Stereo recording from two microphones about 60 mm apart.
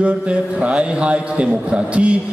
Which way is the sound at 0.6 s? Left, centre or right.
Centre.